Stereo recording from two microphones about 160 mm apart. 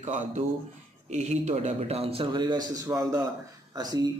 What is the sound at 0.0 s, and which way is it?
A man's voice, 45° right (ahead or behind).